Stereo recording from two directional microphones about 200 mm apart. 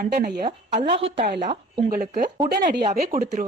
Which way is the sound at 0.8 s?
30° right (ahead or behind).